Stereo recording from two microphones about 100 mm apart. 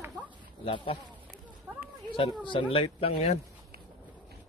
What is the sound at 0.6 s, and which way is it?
Speech, 60° left (ahead or behind).